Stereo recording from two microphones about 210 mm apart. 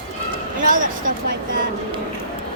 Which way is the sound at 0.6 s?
40° right (ahead or behind).